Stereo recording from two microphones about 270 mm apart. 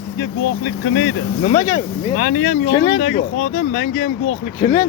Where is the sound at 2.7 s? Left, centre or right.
Left.